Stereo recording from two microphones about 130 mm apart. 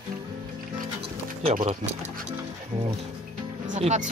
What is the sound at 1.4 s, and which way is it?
Speech, 65° right (ahead or behind).